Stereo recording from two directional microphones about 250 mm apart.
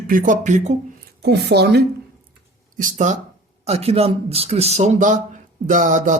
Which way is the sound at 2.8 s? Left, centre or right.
Right.